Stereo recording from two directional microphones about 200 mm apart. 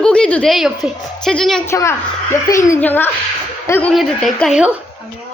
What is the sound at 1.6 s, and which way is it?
A woman's voice, 15° left (ahead or behind).